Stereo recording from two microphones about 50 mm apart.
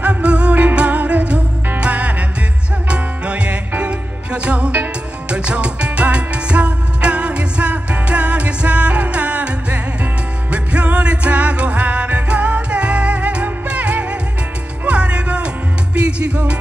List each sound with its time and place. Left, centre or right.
0.0 s music: right